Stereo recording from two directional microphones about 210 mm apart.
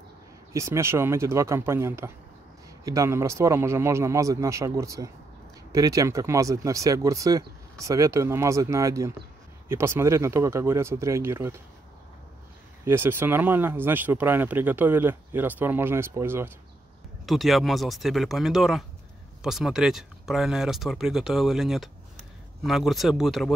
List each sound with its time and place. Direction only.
0.5 s speech: 15° right (ahead or behind)
12.8 s speech: 10° right (ahead or behind)
17.3 s speech: centre (ahead or behind)